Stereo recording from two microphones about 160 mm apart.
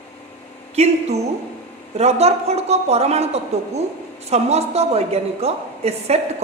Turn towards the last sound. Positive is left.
turn(degrees=-40)  # may be behind; listen again after turning